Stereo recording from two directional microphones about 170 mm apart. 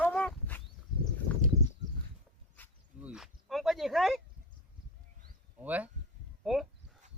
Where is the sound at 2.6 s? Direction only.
10° left (ahead or behind).